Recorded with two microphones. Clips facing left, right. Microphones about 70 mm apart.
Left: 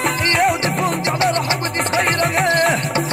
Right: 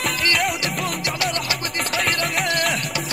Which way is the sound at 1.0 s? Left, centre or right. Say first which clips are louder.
Left 7 dB; left.